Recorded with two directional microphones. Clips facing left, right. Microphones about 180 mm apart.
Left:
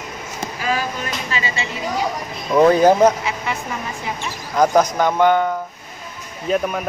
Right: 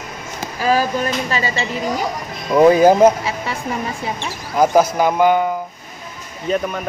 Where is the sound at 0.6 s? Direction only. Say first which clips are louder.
Right 6 dB; 40° right (ahead or behind).